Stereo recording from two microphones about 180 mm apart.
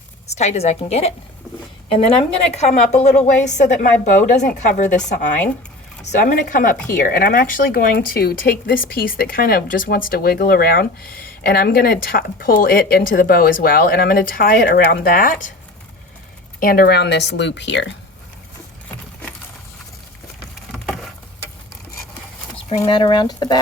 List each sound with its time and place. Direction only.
0.3 s a woman's voice: 35° left (ahead or behind)
16.6 s speech: 55° left (ahead or behind); by 17.9 s 75° left (ahead or behind)
20.7 s patter: centre (ahead or behind)
22.8 s speech: 25° left (ahead or behind)